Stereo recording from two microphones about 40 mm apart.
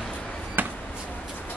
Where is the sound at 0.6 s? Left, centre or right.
Right.